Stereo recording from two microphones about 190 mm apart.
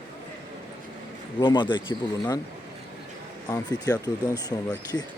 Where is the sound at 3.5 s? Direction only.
20° left (ahead or behind).